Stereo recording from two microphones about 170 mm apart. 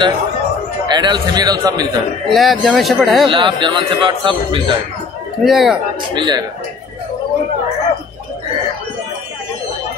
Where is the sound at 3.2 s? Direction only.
30° right (ahead or behind).